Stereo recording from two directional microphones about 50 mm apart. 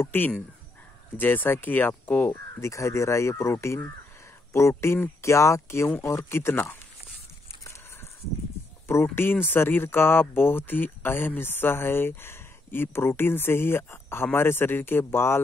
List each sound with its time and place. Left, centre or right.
0.0 s speech: left
2.6 s speech: left
5.2 s speech: left
6.2 s speech: left
9.1 s speech: left